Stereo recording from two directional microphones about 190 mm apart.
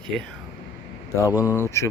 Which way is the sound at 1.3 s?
10° right (ahead or behind).